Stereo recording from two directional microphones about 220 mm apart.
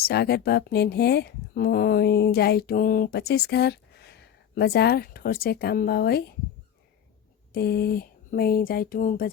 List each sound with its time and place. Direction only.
0.0 s speech: 45° left (ahead or behind)
7.5 s speech: 45° left (ahead or behind)